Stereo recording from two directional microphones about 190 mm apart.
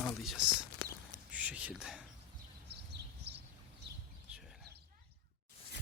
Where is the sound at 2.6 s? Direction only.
60° right (ahead or behind).